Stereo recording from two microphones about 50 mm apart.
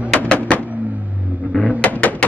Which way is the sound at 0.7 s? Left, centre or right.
Right.